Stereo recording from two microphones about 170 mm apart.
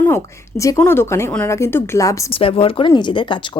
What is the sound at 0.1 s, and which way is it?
A woman's voice, 20° left (ahead or behind).